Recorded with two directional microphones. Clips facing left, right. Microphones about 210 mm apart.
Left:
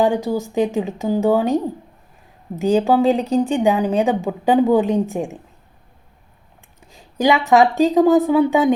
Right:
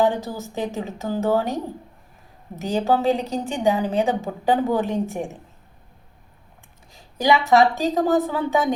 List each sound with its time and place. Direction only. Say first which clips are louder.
0.0 s speech: left 4 dB; 15° left (ahead or behind)
2.6 s speech: left 6 dB; 15° left (ahead or behind)
6.9 s speech: left 3 dB; 15° left (ahead or behind)